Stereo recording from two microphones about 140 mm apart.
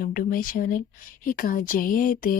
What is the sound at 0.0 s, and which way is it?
A woman's voice, 90° left.